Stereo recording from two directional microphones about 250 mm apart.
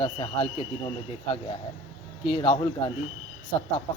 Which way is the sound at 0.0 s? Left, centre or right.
Left.